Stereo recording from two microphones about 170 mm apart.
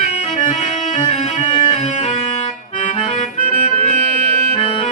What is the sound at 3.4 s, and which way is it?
Music, 40° left (ahead or behind).